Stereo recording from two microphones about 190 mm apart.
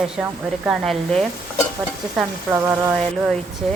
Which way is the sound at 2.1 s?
10° right (ahead or behind).